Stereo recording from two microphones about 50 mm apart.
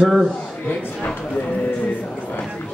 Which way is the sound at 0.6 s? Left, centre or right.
Left.